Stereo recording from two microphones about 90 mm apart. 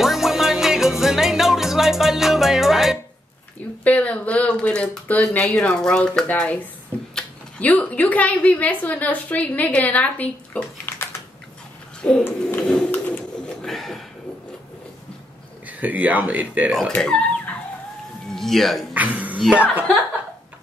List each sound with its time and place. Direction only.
0.0 s music: 5° right (ahead or behind)
3.8 s speech: 15° left (ahead or behind)
12.0 s a sound: 10° left (ahead or behind)
12.3 s a sound: 20° left (ahead or behind)
12.6 s pigeon: 10° left (ahead or behind)
13.7 s a sound: centre (ahead or behind)
15.6 s speech: 15° right (ahead or behind)
18.3 s speech: 5° left (ahead or behind)
18.9 s speech: 20° right (ahead or behind)